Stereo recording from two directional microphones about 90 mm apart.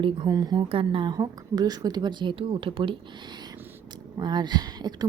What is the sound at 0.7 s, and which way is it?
Speech, 80° right.